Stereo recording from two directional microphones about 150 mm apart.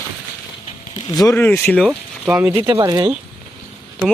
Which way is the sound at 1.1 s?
20° left (ahead or behind).